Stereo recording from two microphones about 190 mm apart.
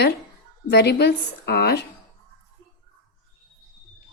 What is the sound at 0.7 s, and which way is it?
A woman's voice, 60° left (ahead or behind).